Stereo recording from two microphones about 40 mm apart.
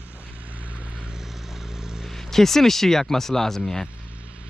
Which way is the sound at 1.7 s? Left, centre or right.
Centre.